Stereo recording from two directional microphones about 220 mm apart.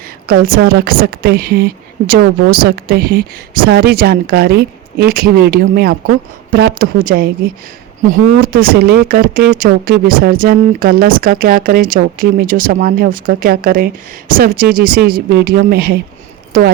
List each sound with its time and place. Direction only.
0.3 s a woman's voice: 40° right (ahead or behind)